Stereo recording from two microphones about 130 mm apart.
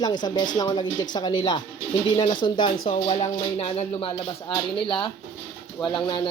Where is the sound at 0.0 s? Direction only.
30° left (ahead or behind); by 4.1 s 45° left (ahead or behind).